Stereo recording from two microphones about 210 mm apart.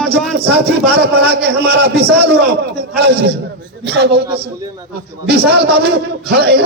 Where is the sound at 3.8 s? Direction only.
55° right (ahead or behind).